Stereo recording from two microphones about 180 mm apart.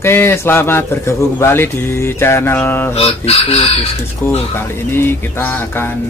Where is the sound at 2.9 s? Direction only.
35° left (ahead or behind).